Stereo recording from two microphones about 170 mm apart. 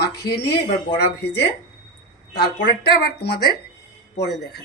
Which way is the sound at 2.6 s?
70° left (ahead or behind).